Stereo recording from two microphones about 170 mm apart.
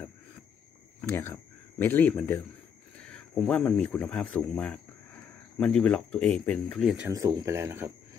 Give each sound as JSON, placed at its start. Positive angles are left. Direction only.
{"t": 1.0, "sound": "speech", "side_deg": 15}
{"t": 7.1, "sound": "speech", "side_deg": -20}